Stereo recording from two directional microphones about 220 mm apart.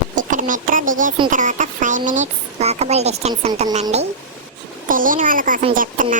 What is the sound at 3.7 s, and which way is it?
A woman's voice, 30° right (ahead or behind).